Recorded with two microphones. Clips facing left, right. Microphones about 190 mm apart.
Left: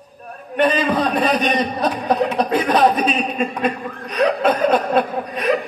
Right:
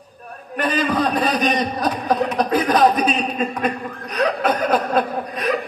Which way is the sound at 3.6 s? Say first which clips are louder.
Left 1 dB; 30° left (ahead or behind).